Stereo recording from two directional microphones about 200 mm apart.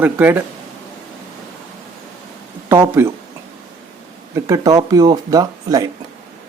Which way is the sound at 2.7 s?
15° right (ahead or behind).